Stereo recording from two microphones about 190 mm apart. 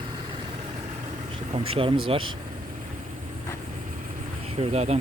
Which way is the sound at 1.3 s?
30° right (ahead or behind).